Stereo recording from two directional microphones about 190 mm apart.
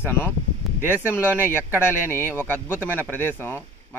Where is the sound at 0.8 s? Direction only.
10° right (ahead or behind).